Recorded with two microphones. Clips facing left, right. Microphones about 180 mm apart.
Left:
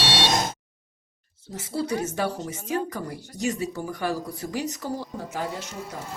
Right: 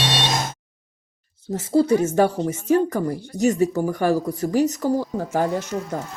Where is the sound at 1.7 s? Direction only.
45° right (ahead or behind).